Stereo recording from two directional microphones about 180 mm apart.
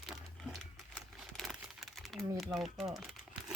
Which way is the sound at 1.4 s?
Centre (ahead or behind).